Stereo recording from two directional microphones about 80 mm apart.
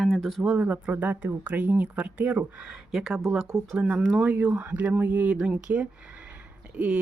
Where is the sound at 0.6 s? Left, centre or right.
Centre.